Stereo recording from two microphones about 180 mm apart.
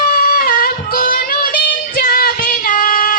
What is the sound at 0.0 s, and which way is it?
Music, 55° left (ahead or behind).